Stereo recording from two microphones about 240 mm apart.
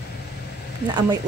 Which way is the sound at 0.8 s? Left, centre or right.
Centre.